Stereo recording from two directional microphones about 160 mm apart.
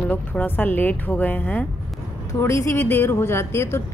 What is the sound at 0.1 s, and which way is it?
A woman's voice, 10° left (ahead or behind).